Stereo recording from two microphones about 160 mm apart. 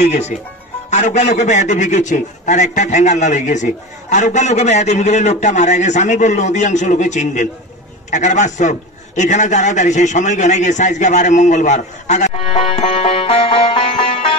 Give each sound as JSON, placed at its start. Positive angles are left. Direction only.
{"t": 0.0, "sound": "a man's voice", "side_deg": 45}
{"t": 12.4, "sound": "music", "side_deg": 35}